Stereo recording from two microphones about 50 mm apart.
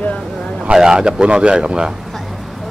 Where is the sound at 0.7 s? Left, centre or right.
Centre.